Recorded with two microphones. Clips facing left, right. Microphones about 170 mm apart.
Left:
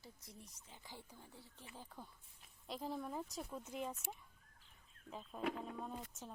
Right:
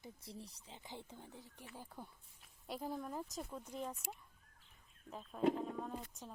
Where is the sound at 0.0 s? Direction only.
30° right (ahead or behind).